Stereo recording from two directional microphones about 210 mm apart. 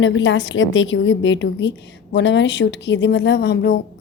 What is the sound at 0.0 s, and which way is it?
Speech, 60° left (ahead or behind).